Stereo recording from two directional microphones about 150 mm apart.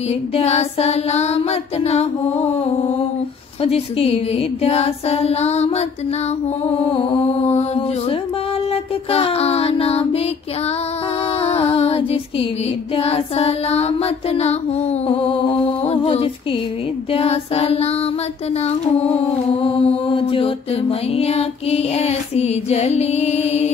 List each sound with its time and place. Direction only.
0.4 s music: 45° left (ahead or behind)
3.6 s music: 40° left (ahead or behind)
6.8 s mantra: 35° left (ahead or behind)
11.4 s music: 45° left (ahead or behind)
15.8 s music: 45° left (ahead or behind)
18.9 s mantra: 40° left (ahead or behind)
21.1 s music: 45° left (ahead or behind)